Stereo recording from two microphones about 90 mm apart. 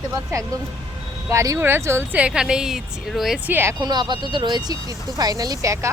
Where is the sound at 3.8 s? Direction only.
55° right (ahead or behind); by 5.8 s 35° right (ahead or behind).